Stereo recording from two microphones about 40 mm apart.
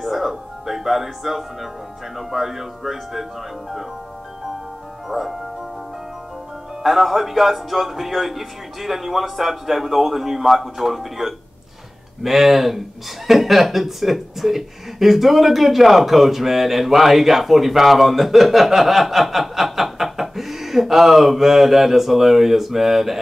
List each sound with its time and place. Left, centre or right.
0.0 s music: centre
2.1 s speech: centre
5.0 s speech: centre
6.8 s speech: centre